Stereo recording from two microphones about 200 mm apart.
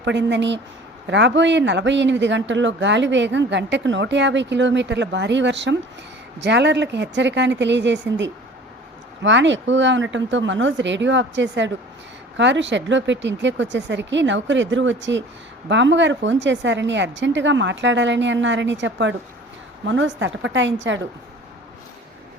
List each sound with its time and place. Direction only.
0.0 s a man's voice: 60° right (ahead or behind)